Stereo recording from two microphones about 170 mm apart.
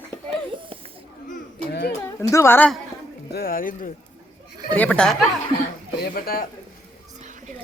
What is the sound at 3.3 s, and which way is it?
Speech, 60° left (ahead or behind).